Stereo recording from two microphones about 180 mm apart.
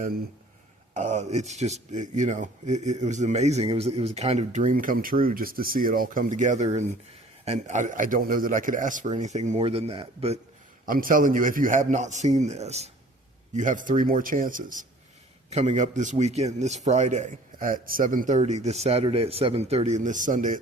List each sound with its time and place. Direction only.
0.9 s speech: 40° right (ahead or behind)
10.8 s a man's voice: 50° right (ahead or behind)
15.4 s speech: 35° right (ahead or behind)